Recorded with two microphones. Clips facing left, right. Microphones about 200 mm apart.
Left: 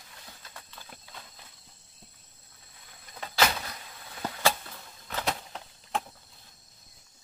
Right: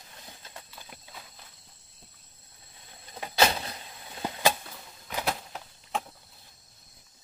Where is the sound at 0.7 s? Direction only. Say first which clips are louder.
Right 1 dB; 5° right (ahead or behind).